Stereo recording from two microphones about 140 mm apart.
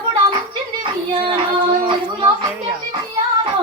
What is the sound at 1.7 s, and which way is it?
Child singing, 35° right (ahead or behind).